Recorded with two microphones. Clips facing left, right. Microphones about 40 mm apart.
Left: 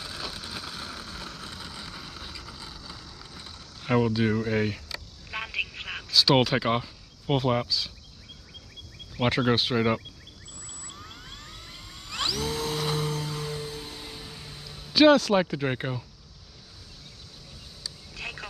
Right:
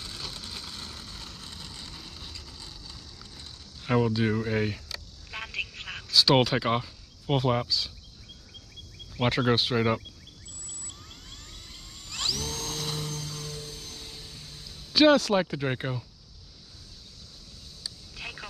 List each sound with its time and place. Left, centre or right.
0.0 s vehicle: centre
6.1 s speech: centre
9.2 s speech: centre
10.9 s dental drill: left
15.0 s speech: centre